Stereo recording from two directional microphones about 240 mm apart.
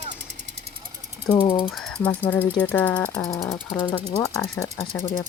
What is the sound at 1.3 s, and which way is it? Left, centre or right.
Speech, centre.